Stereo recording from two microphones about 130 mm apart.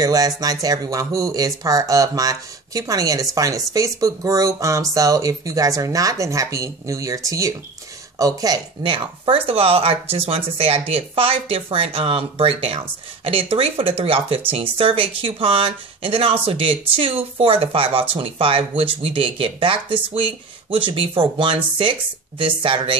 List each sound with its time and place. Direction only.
0.0 s speech: 30° right (ahead or behind)